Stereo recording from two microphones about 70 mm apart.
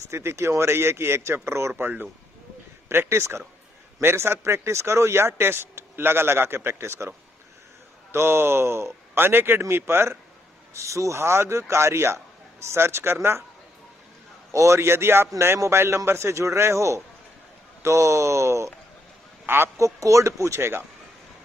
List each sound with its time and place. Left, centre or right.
0.1 s speech: right
8.1 s speech: right
10.7 s speech: right
14.5 s speech: right
19.4 s speech: right
19.8 s speech: right